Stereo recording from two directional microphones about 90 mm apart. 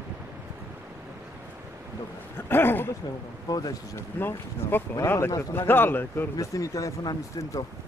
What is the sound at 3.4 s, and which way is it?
Speech, 45° left (ahead or behind).